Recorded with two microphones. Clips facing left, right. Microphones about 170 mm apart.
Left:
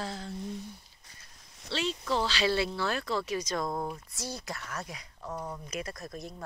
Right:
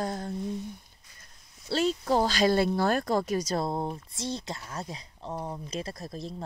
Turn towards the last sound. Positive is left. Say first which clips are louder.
# right 2 dB
turn(degrees=-30)  # may be behind; listen again after turning